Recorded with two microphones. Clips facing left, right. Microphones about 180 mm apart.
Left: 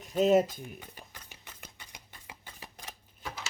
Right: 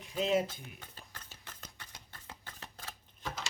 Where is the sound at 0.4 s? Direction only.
15° left (ahead or behind).